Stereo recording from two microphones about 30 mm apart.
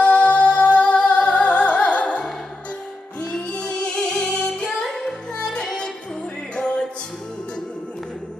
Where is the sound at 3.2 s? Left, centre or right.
Left.